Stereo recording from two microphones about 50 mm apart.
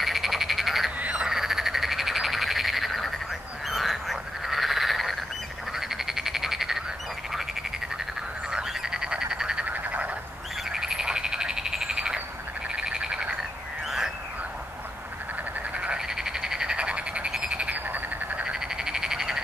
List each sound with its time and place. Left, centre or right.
0.0 s frog: centre
0.9 s croak: right
1.2 s frog: centre
8.5 s frog: centre
9.7 s frog: right
10.7 s frog: centre
13.8 s a sound: centre
15.7 s frog: right
16.1 s frog: centre
17.3 s frog: centre
17.6 s frog: right
18.4 s frog: centre